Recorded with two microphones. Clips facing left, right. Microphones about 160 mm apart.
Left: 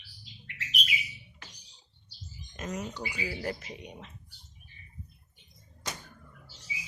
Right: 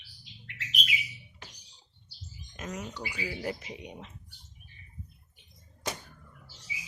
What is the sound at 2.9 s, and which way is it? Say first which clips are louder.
Speech: left 1 dB; 15° left (ahead or behind).